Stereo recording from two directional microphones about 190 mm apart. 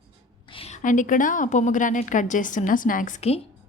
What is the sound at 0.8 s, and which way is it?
Speech, 45° left (ahead or behind).